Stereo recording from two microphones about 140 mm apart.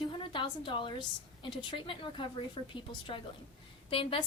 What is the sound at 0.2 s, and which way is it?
A woman's voice, 35° left (ahead or behind).